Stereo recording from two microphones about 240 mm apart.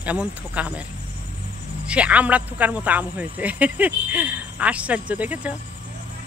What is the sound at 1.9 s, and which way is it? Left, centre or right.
Speech, centre.